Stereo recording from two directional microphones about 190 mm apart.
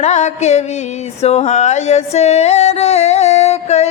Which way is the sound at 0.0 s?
35° left (ahead or behind).